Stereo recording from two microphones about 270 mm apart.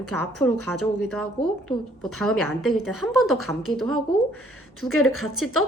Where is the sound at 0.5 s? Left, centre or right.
Left.